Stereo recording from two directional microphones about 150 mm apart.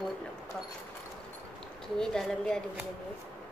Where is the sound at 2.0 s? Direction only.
5° left (ahead or behind).